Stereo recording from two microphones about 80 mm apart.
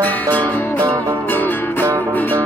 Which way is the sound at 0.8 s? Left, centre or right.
Right.